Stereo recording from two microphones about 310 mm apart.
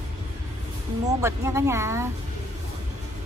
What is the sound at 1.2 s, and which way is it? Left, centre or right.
Speech, centre.